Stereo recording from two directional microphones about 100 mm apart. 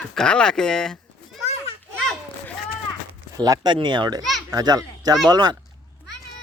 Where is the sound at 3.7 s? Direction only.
50° right (ahead or behind).